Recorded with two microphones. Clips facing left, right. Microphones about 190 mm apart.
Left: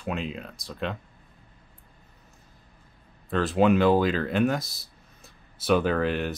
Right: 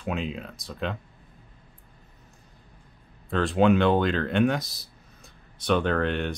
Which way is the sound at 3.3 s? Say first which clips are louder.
Even; centre (ahead or behind).